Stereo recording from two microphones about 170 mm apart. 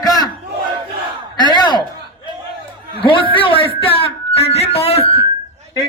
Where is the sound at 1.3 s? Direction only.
25° left (ahead or behind).